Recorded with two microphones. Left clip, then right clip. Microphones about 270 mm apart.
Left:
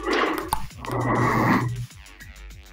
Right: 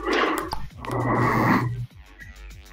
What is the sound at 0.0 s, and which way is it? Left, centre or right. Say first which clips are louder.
Dog: right 1 dB; centre.